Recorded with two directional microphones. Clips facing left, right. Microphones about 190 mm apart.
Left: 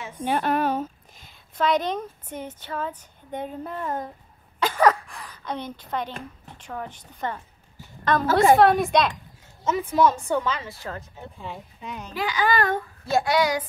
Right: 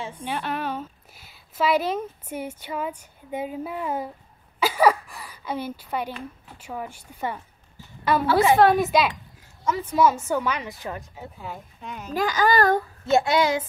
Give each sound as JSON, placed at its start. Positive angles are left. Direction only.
{"t": 0.2, "sound": "a woman's voice", "side_deg": 50}
{"t": 1.1, "sound": "a woman's voice", "side_deg": -5}
{"t": 4.6, "sound": "a sound", "side_deg": -10}
{"t": 6.6, "sound": "a woman's voice", "side_deg": -10}
{"t": 11.3, "sound": "speech", "side_deg": 0}
{"t": 12.1, "sound": "a child's voice", "side_deg": -45}
{"t": 13.0, "sound": "speech", "side_deg": -25}